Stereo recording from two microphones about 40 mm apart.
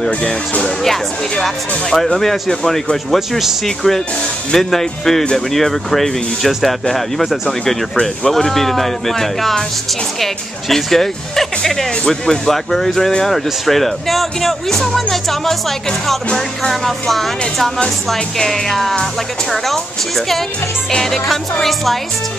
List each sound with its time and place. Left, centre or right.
0.2 s speech: left
0.7 s speech: centre
3.2 s speech: centre
3.6 s speech: centre